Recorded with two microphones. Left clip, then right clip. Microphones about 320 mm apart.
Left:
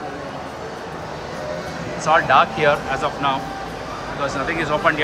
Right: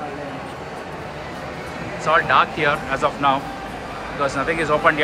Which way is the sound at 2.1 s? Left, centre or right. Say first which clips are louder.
Left 1 dB; centre.